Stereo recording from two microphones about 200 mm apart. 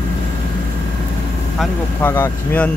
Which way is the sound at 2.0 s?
10° left (ahead or behind).